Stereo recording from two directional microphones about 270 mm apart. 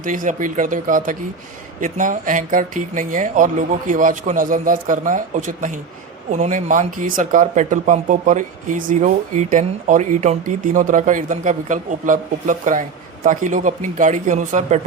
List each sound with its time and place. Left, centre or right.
0.0 s speech: right